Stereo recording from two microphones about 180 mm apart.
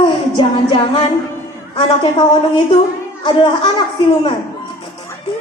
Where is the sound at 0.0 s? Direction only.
30° left (ahead or behind).